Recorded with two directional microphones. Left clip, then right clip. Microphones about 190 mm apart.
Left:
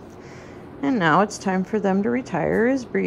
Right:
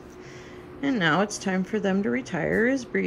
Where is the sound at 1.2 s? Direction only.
15° left (ahead or behind).